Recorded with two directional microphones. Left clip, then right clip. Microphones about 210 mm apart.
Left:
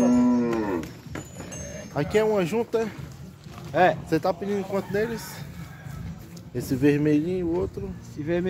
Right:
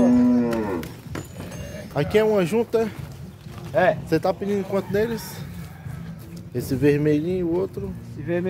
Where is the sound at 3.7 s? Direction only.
55° left (ahead or behind).